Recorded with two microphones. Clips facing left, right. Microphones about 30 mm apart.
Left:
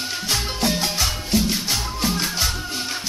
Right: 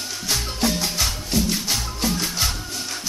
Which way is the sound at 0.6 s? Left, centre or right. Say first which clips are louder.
Even; centre.